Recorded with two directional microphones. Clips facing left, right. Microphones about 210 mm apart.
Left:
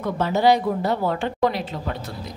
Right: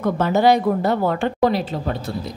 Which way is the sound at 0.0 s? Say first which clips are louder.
Right 3 dB; 50° right (ahead or behind).